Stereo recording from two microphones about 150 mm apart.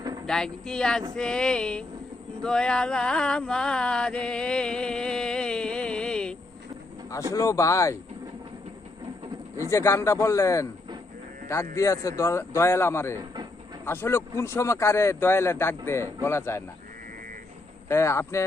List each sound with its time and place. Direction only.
0.3 s a sound: 5° left (ahead or behind)
7.3 s speech: 20° left (ahead or behind)
9.6 s speech: 20° left (ahead or behind)
13.1 s train: 30° right (ahead or behind)
13.8 s speech: 15° left (ahead or behind)
17.8 s speech: 20° left (ahead or behind)